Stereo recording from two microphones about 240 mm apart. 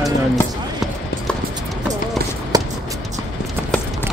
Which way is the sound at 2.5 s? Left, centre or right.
Centre.